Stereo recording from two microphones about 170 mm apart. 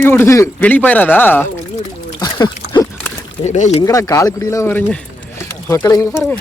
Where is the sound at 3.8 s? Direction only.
20° left (ahead or behind).